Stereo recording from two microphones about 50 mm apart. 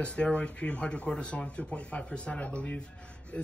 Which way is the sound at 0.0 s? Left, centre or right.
Left.